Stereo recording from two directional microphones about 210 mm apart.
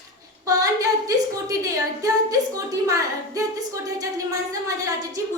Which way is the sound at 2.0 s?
15° right (ahead or behind).